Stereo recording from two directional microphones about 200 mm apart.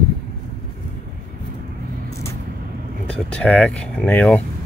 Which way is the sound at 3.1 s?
5° left (ahead or behind).